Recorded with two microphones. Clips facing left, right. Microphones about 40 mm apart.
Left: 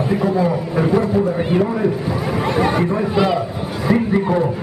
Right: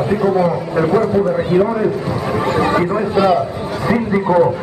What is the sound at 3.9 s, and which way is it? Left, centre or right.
Speech, centre.